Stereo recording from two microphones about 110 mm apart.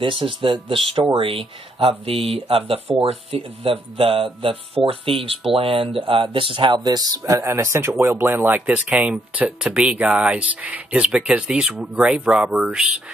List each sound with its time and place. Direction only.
0.0 s speech: 50° right (ahead or behind); by 13.0 s 5° right (ahead or behind)